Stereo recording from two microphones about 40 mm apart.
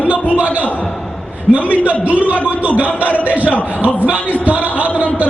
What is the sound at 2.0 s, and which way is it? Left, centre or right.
A man's voice, right.